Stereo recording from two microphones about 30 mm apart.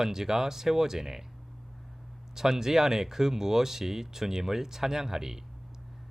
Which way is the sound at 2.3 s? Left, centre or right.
Centre.